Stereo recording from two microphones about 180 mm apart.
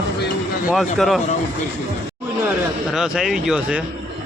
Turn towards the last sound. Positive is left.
turn(degrees=-5)  # may be behind; listen again after turning